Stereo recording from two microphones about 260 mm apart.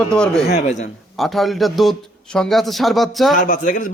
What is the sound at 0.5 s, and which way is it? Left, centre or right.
Speech, left.